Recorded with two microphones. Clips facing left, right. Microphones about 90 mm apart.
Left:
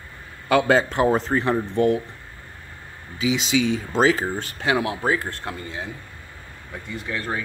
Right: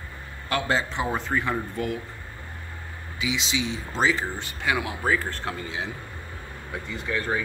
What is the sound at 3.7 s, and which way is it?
Speech, 45° left (ahead or behind).